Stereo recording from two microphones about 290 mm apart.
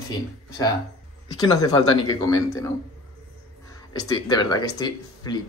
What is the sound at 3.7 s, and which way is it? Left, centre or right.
Speech, centre.